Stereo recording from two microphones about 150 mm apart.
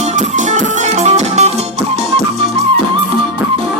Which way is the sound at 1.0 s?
45° right (ahead or behind).